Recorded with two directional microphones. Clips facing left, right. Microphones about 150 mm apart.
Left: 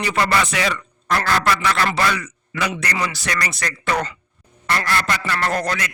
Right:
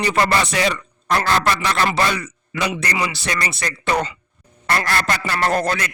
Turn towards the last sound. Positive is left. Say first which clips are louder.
# right 3 dB
turn(degrees=-30)  # may be behind; listen again after turning